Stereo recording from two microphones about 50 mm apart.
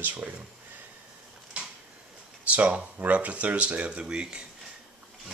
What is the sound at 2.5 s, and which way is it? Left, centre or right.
Speech, right.